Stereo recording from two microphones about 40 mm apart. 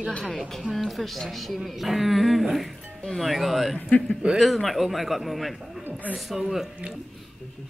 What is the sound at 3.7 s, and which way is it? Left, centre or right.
Speech, left.